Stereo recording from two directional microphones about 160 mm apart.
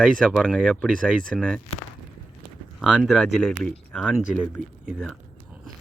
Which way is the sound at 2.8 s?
Centre (ahead or behind).